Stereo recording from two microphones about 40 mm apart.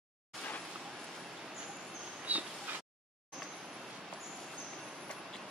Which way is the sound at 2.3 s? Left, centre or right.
Right.